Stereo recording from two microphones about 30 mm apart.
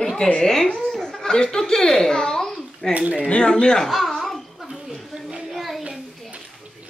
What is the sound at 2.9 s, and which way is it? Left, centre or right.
Speech, right.